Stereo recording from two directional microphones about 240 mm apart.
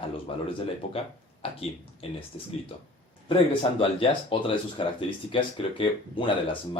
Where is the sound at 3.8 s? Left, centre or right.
Left.